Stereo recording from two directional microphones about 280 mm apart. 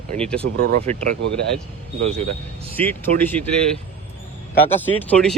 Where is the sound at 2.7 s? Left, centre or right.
Centre.